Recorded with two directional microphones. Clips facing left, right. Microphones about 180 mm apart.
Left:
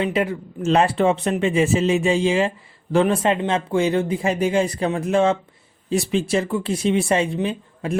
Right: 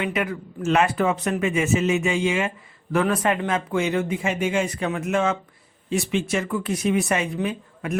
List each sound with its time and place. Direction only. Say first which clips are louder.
0.0 s speech: left 4 dB; 30° left (ahead or behind)